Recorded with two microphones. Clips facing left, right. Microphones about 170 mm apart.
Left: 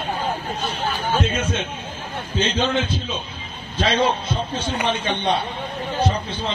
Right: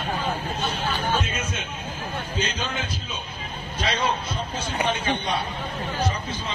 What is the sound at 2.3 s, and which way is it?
A man's voice, 25° left (ahead or behind).